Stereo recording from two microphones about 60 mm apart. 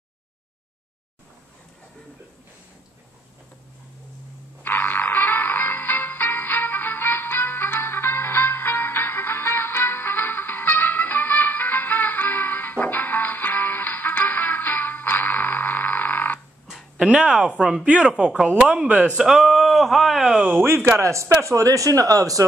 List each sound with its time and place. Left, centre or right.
4.6 s music: left
16.9 s speech: centre
19.2 s speech: centre
20.5 s speech: right